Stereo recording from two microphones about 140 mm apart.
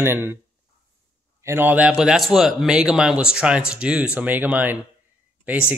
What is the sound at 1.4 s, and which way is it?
Speech, 15° right (ahead or behind).